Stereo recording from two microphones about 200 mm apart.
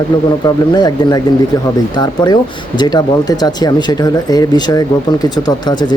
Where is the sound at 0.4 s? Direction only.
20° left (ahead or behind).